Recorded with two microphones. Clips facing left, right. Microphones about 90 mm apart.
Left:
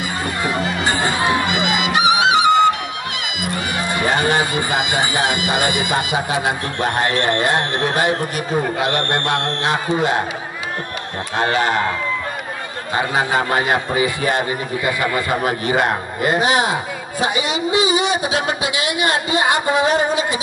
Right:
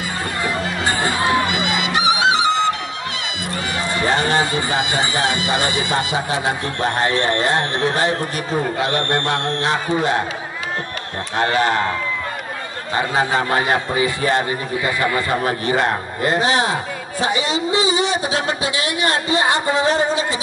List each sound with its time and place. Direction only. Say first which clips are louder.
0.4 s music: left 1 dB; 20° left (ahead or behind)
3.7 s a man's voice: even; 15° left (ahead or behind)
11.3 s speech: even; 20° left (ahead or behind)
12.9 s a man's voice: even; 15° left (ahead or behind)